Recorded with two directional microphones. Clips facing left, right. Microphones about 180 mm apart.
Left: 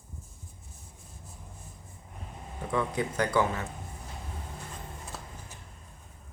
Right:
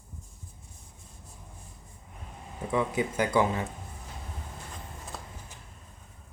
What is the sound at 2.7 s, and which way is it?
Speech, 10° right (ahead or behind).